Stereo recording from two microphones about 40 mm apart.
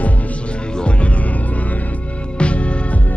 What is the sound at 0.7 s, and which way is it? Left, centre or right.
Music, left.